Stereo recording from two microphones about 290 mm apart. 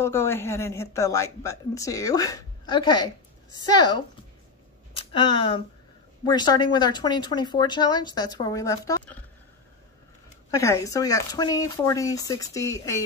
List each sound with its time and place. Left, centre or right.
0.0 s a woman's voice: centre
10.5 s a woman's voice: centre